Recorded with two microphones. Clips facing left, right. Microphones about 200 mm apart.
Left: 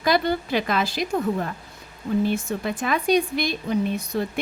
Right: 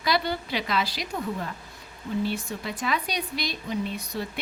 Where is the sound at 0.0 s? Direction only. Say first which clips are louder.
Left 5 dB; 50° left (ahead or behind).